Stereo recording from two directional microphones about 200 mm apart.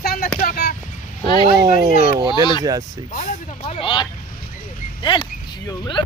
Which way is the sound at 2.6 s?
15° right (ahead or behind).